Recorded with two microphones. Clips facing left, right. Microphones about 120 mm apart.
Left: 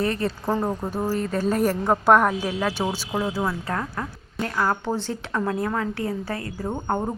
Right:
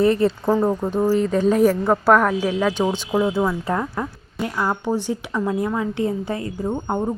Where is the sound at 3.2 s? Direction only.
Centre (ahead or behind).